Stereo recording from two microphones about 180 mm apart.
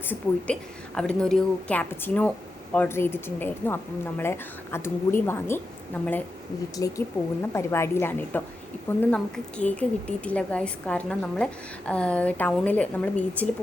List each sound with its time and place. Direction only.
0.0 s a woman's voice: 10° left (ahead or behind)